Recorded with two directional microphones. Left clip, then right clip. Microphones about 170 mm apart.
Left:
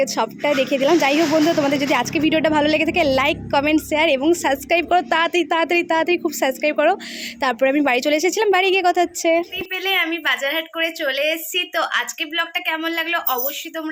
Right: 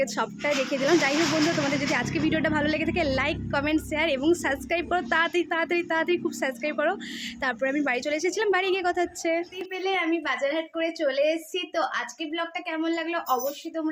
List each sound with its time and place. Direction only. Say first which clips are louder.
0.0 s a woman's voice: left 7 dB; 35° left (ahead or behind)
9.7 s a woman's voice: left 6 dB; centre (ahead or behind)